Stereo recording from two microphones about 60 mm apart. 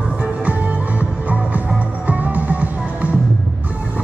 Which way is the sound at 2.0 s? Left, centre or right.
Right.